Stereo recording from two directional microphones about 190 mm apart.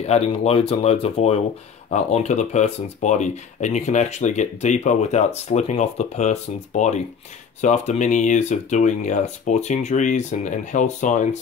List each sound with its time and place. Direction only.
0.0 s speech: 35° left (ahead or behind)